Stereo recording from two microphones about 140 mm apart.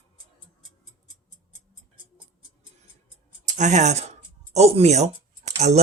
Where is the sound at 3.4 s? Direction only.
60° right (ahead or behind).